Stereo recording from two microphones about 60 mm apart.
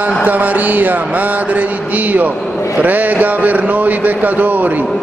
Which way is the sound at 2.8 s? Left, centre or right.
Right.